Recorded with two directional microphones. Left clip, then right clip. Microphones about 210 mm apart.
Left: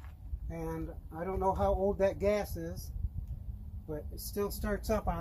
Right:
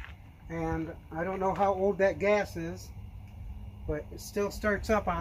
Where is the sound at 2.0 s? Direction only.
25° left (ahead or behind).